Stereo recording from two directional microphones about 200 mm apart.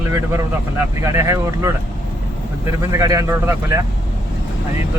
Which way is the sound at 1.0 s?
15° right (ahead or behind).